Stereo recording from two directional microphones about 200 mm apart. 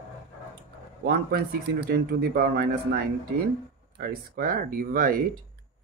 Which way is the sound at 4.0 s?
50° right (ahead or behind).